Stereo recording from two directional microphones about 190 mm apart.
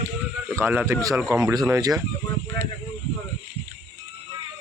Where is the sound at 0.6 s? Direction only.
10° right (ahead or behind).